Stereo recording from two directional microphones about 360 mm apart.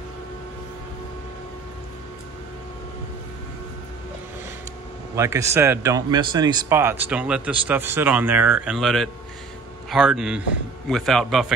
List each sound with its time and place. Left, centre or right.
5.1 s speech: centre